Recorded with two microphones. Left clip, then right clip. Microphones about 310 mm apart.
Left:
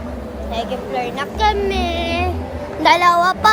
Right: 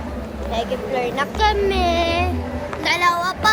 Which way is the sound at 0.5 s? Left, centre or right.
Centre.